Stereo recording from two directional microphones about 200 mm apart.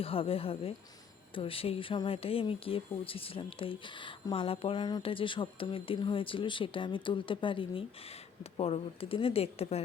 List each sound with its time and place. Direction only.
0.0 s speech: 30° left (ahead or behind)